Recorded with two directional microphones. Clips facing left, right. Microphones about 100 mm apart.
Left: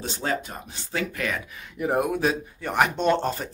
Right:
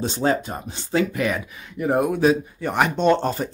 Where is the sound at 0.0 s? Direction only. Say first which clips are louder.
Right 7 dB; 30° right (ahead or behind).